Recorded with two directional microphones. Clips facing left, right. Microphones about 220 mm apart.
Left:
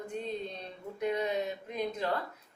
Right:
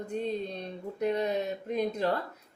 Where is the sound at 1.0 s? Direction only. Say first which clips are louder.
Right 3 dB; 40° right (ahead or behind).